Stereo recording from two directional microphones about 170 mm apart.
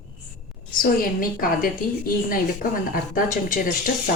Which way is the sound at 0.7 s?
60° left (ahead or behind).